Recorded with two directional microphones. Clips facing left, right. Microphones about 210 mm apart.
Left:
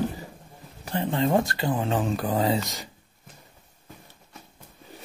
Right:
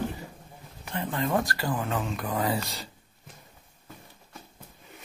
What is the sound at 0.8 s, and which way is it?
Speech, 30° left (ahead or behind).